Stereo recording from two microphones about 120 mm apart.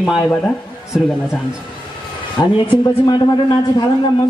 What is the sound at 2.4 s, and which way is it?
Speech, 25° left (ahead or behind).